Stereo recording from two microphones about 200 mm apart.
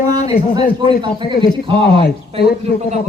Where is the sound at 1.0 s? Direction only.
25° right (ahead or behind).